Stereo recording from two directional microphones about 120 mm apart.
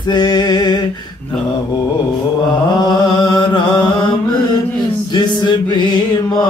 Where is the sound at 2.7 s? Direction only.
35° left (ahead or behind).